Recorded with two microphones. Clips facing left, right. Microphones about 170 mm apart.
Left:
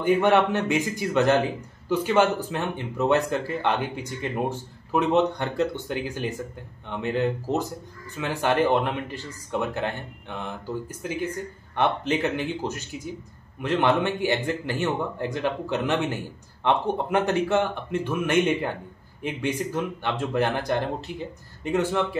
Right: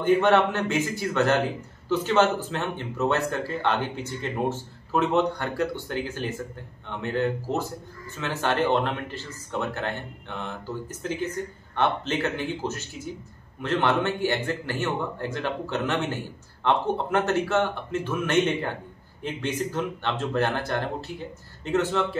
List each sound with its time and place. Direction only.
0.0 s speech: 10° left (ahead or behind)